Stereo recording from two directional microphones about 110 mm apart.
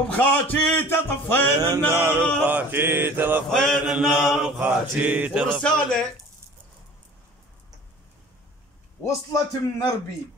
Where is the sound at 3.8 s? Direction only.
5° right (ahead or behind).